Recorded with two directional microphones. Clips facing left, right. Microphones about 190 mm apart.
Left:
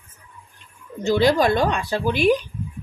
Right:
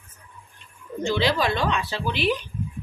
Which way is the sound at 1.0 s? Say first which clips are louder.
Left 6 dB; 45° left (ahead or behind).